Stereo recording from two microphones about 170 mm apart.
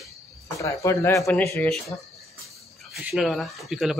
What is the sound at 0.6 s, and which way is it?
Speech, 20° left (ahead or behind).